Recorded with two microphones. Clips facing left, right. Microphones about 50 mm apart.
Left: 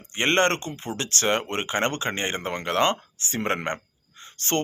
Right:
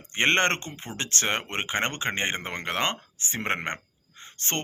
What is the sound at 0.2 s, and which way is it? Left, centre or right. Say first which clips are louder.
Speech: left 1 dB; right.